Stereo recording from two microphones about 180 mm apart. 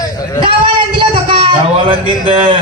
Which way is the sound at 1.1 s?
30° right (ahead or behind).